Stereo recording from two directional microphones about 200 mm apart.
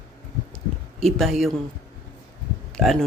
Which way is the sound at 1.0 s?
Centre (ahead or behind).